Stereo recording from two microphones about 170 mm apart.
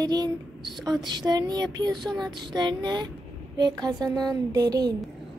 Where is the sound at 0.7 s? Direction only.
25° right (ahead or behind).